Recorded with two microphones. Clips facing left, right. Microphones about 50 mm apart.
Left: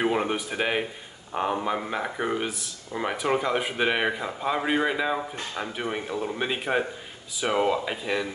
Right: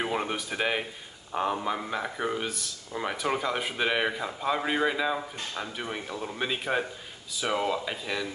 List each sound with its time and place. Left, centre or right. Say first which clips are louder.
0.0 s speech: left 5 dB; centre